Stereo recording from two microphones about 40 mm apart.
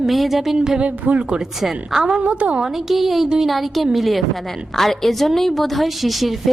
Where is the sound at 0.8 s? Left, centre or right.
Right.